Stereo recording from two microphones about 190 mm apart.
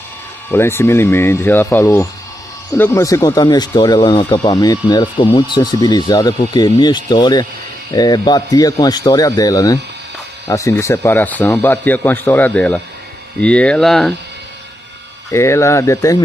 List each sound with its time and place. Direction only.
0.5 s speech: 10° left (ahead or behind)
15.3 s speech: 15° left (ahead or behind)